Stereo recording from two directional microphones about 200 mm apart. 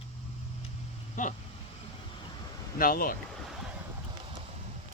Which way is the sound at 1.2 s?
40° left (ahead or behind).